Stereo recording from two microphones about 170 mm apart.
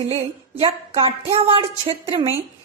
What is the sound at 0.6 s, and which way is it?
A woman's voice, 30° right (ahead or behind).